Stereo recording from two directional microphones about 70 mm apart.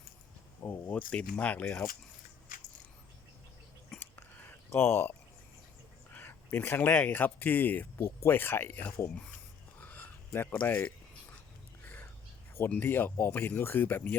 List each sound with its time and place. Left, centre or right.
0.6 s speech: left
0.9 s speech: centre
4.0 s a sound: left
6.1 s speech: left
7.9 s speech: left
9.8 s a sound: left
12.6 s speech: left